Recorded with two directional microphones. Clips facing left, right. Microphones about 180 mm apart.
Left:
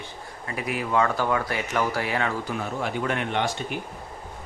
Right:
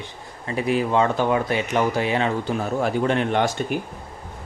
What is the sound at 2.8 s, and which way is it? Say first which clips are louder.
Speech: right 7 dB; 35° right (ahead or behind).